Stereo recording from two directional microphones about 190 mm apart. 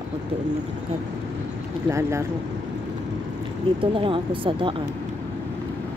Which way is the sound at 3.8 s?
30° right (ahead or behind).